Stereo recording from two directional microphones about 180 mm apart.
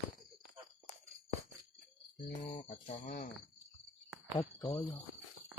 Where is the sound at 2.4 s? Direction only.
40° left (ahead or behind).